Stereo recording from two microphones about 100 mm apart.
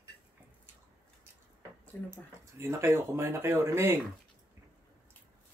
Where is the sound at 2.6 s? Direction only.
25° right (ahead or behind).